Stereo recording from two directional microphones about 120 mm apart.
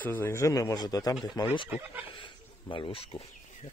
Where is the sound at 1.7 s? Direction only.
10° right (ahead or behind).